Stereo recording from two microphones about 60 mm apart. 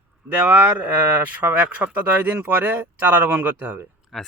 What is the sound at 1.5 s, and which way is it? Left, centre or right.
Speech, right.